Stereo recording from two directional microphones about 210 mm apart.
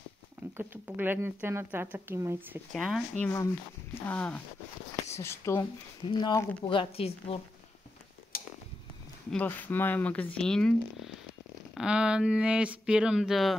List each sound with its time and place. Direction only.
0.6 s speech: 10° right (ahead or behind)
2.7 s a woman's voice: centre (ahead or behind); by 7.3 s 25° left (ahead or behind)
8.3 s a sound: 45° left (ahead or behind)
9.3 s speech: 10° left (ahead or behind)